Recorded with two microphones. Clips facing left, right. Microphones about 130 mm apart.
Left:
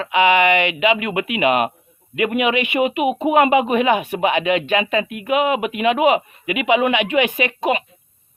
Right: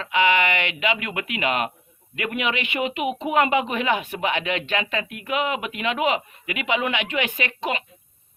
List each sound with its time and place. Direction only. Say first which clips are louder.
0.0 s speech: left 5 dB; 15° left (ahead or behind)